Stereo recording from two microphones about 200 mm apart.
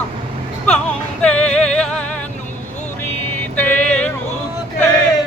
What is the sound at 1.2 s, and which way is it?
Music, 5° left (ahead or behind).